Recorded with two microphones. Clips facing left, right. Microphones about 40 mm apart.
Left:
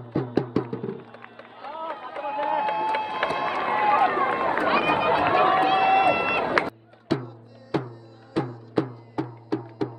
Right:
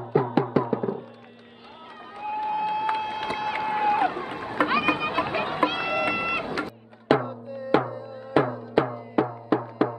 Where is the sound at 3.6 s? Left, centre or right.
Left.